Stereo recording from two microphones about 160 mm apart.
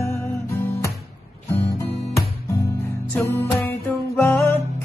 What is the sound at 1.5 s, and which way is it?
Music, 15° left (ahead or behind).